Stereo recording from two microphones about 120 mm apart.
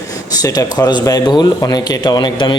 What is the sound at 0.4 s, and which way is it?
Speech, 35° left (ahead or behind).